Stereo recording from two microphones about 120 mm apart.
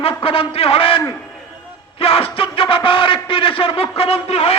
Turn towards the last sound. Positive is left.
turn(degrees=60)  # may be behind; listen again after turning